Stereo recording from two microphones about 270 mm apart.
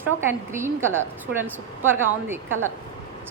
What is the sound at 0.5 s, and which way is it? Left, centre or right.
A woman's voice, centre.